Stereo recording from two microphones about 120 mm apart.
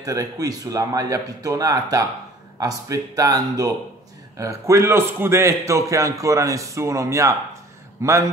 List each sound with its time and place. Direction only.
0.0 s a man's voice: 30° right (ahead or behind)